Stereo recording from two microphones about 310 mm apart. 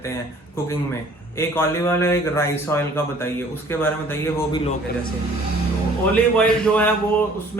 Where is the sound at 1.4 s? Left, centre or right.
Centre.